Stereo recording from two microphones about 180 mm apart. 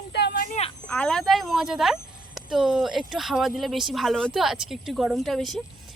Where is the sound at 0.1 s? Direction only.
70° left (ahead or behind).